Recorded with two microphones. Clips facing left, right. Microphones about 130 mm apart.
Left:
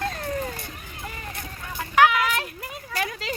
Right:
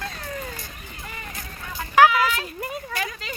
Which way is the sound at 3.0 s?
80° left.